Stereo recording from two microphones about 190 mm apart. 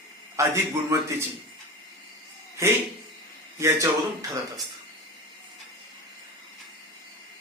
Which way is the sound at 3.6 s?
15° right (ahead or behind).